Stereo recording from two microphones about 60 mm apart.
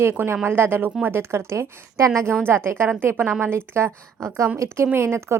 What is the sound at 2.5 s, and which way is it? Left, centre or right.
A woman's voice, right.